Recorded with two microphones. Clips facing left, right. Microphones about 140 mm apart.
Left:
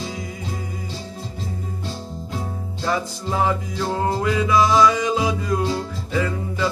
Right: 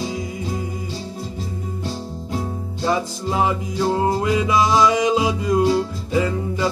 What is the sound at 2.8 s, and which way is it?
Music, 15° right (ahead or behind).